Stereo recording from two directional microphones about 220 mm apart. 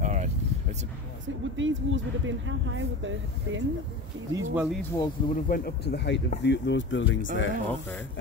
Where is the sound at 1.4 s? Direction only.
60° right (ahead or behind).